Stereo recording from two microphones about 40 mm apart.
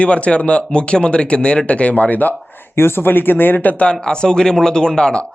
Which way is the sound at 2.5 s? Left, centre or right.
Left.